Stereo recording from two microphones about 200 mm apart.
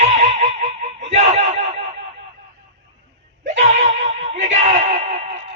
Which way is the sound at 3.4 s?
35° right (ahead or behind).